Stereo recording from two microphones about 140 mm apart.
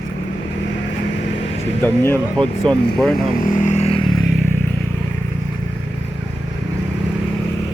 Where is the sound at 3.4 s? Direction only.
70° left (ahead or behind); by 4.0 s 45° left (ahead or behind).